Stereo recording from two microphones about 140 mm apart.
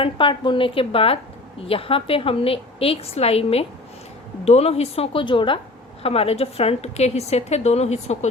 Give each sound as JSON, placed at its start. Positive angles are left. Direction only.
{"t": 0.0, "sound": "a woman's voice", "side_deg": 35}